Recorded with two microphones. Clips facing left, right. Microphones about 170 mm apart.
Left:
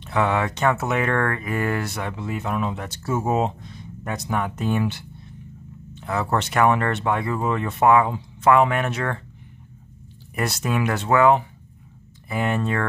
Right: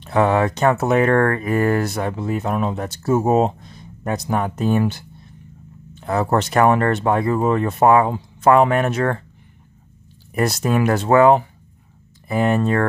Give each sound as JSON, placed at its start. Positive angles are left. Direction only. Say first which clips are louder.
{"t": 0.0, "sound": "speech", "louder": "right 5 dB", "side_deg": -40}
{"t": 10.3, "sound": "speech", "louder": "right 6 dB", "side_deg": -40}